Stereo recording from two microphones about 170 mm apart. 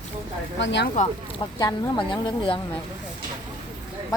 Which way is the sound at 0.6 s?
90° left.